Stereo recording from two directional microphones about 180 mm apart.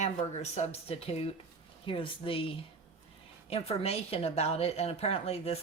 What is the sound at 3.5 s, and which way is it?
A woman's voice, 35° left (ahead or behind).